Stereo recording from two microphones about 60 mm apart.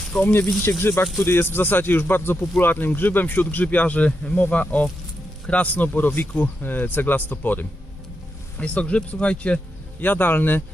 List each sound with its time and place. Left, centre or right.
0.1 s speech: left
0.8 s speech: left; by 9.6 s centre
10.0 s speech: left